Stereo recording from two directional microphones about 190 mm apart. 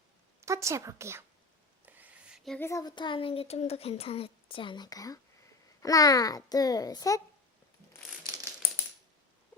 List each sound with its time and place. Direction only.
0.4 s a woman's voice: 15° right (ahead or behind)
1.8 s a sound: 10° right (ahead or behind)
2.6 s speech: 15° left (ahead or behind)
8.3 s rattle: 15° right (ahead or behind)